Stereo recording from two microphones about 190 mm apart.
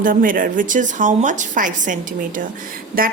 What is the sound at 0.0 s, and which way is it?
A woman's voice, 45° right (ahead or behind).